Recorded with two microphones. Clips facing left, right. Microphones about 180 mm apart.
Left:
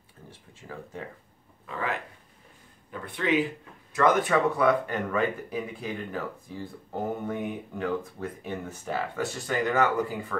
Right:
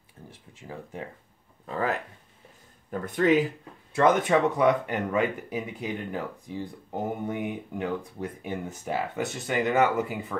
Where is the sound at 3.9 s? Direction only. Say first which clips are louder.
Right 1 dB; 25° right (ahead or behind).